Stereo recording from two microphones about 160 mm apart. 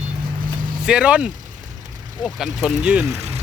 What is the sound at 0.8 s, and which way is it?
Speech, 5° right (ahead or behind).